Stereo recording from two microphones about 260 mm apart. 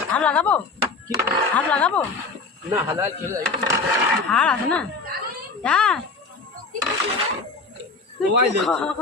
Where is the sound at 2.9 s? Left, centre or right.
Centre.